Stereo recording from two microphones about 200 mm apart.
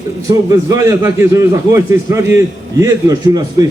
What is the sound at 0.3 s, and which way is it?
A man's voice, 15° right (ahead or behind).